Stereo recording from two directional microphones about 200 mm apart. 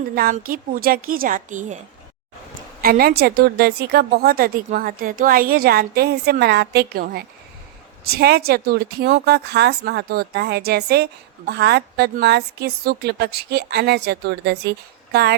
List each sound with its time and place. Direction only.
0.2 s a woman's voice: 45° right (ahead or behind)
2.8 s a woman's voice: 50° right (ahead or behind)